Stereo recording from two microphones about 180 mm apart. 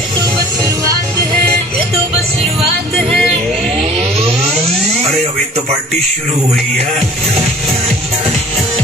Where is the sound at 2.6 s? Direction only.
Centre (ahead or behind).